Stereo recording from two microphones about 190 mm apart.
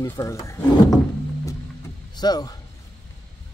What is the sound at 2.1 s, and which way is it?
Speech, 20° left (ahead or behind).